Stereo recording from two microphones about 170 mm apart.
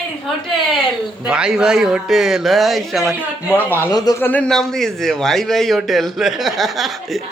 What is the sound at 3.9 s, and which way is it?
Speech, 20° left (ahead or behind).